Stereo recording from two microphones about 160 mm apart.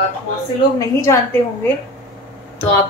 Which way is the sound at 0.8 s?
20° left (ahead or behind).